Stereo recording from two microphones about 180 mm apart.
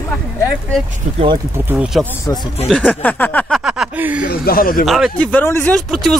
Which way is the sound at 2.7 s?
5° left (ahead or behind).